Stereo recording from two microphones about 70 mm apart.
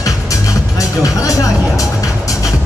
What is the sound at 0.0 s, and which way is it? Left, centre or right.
Music, left.